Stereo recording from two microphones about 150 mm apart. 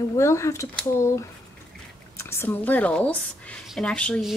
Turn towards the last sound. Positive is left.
turn(degrees=5)  # may be behind; listen again after turning